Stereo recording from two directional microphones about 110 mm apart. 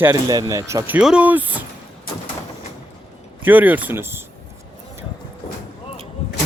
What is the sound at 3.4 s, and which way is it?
Speech, 15° right (ahead or behind).